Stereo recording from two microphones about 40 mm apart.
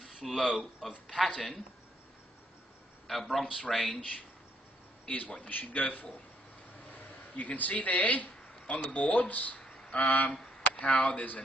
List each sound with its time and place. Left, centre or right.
0.0 s a sound: centre
0.8 s speech: centre
3.1 s speech: centre
5.4 s a man's voice: left
6.9 s a sound: left
8.8 s speech: left